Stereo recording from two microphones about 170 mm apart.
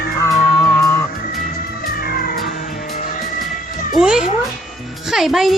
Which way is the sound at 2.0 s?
60° left (ahead or behind).